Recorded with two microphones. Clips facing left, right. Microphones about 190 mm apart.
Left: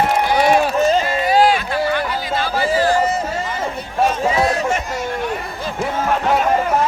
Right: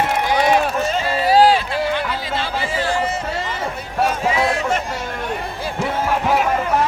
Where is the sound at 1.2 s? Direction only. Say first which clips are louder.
Right 5 dB; 35° right (ahead or behind).